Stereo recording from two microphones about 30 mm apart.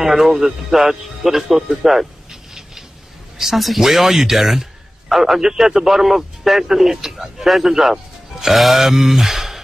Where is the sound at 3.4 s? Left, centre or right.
Centre.